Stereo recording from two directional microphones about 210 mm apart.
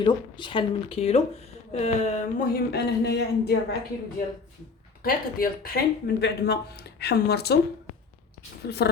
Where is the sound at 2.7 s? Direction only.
50° left (ahead or behind).